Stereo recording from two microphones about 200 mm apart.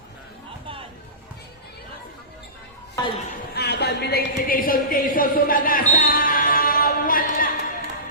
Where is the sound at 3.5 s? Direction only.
55° left (ahead or behind).